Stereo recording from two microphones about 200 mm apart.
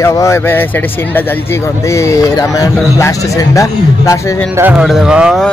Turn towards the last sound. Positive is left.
turn(degrees=0)  # may be behind; listen again after turning